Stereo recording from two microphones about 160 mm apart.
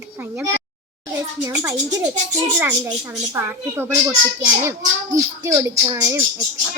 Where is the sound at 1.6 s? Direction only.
20° right (ahead or behind).